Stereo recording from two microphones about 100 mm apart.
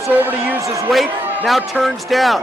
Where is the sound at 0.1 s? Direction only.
15° right (ahead or behind).